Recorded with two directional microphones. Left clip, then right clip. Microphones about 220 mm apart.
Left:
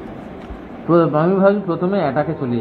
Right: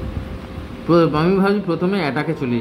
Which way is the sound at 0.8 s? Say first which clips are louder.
Left 1 dB; 30° right (ahead or behind).